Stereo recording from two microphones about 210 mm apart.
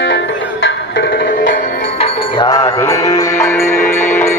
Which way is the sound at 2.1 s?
20° left (ahead or behind).